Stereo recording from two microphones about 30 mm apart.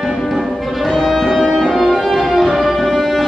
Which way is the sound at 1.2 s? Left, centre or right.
Centre.